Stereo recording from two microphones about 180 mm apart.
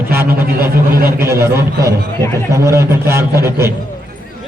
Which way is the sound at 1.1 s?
15° right (ahead or behind).